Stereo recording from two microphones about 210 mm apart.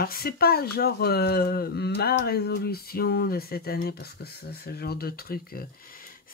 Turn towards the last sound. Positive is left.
turn(degrees=45)  # may be behind; listen again after turning